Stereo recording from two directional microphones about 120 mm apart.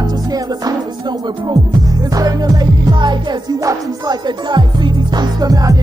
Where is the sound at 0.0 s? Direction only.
30° right (ahead or behind).